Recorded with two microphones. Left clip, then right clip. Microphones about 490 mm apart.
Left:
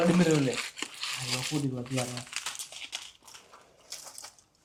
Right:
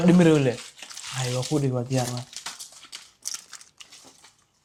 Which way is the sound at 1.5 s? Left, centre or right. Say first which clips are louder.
Right 7 dB; right.